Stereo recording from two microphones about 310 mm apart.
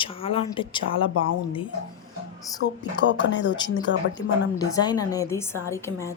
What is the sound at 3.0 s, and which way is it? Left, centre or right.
Speech, left.